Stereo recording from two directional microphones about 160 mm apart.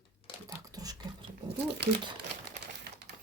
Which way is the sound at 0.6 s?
25° right (ahead or behind).